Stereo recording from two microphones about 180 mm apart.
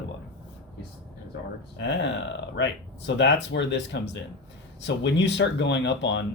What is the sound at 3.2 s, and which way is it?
Speech, 80° left.